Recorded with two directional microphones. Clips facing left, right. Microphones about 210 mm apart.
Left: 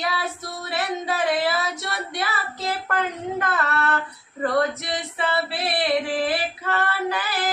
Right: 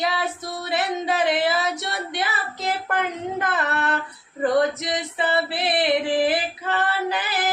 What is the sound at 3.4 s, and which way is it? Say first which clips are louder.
Singing: even; 20° right (ahead or behind).